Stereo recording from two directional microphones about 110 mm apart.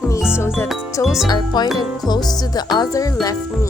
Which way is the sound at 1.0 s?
5° right (ahead or behind).